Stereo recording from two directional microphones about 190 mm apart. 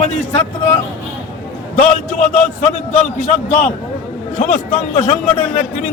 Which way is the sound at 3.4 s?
40° left (ahead or behind).